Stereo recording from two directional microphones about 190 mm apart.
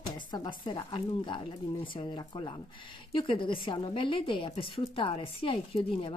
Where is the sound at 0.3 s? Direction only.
25° left (ahead or behind).